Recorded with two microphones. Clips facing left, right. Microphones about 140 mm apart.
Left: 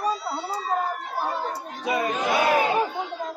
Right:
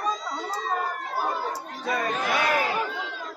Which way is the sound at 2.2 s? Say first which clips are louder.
Left 5 dB; 20° left (ahead or behind).